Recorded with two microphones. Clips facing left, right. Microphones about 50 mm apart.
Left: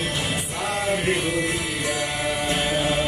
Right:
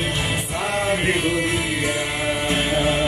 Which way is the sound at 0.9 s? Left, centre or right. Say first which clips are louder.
Right 2 dB; right.